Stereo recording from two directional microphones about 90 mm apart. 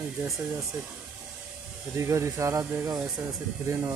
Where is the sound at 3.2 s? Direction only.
35° right (ahead or behind).